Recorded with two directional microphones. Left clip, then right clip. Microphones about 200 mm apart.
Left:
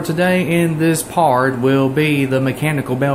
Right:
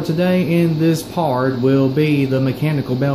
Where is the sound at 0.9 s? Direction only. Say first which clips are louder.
Left 3 dB; centre (ahead or behind).